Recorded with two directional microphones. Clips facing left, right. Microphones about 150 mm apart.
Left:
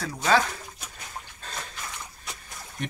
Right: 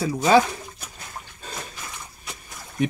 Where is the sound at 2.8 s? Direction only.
5° right (ahead or behind).